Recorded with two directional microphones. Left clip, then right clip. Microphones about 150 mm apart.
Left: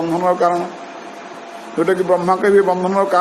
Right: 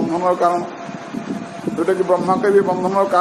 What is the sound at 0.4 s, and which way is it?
Speech, 35° left (ahead or behind).